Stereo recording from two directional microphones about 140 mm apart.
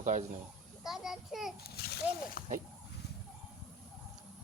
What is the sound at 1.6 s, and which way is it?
Splash, 90° left.